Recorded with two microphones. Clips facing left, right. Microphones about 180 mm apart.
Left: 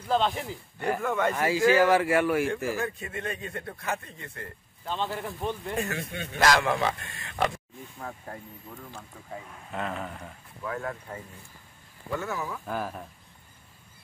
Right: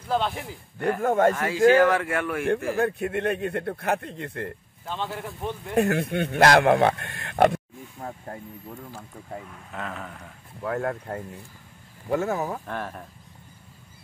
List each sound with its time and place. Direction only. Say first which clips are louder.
0.1 s speech: even; 10° right (ahead or behind)
1.0 s speech: right 8 dB; 45° right (ahead or behind)
1.3 s speech: right 4 dB; 10° left (ahead or behind)
2.4 s speech: right 5 dB; 60° right (ahead or behind)
5.1 s speech: even; 10° right (ahead or behind)
5.8 s speech: right 10 dB; 60° right (ahead or behind)
9.7 s speech: left 3 dB; centre (ahead or behind)
10.6 s speech: right 6 dB; 60° right (ahead or behind)
12.1 s speech: right 7 dB; 45° right (ahead or behind)
12.6 s speech: left 1 dB; 5° left (ahead or behind)